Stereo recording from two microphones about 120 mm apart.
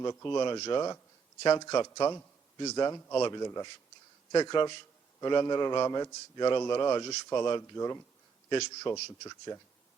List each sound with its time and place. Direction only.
0.0 s a man's voice: 25° left (ahead or behind)
7.8 s speech: 20° left (ahead or behind)
8.4 s a man's voice: 35° left (ahead or behind)